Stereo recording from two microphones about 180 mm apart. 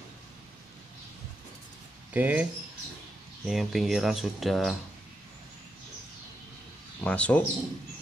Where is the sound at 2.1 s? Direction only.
10° right (ahead or behind).